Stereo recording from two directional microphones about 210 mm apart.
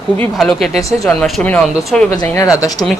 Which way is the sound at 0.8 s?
15° left (ahead or behind).